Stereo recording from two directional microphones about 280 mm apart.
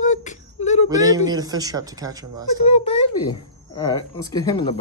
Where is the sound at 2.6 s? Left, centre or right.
Left.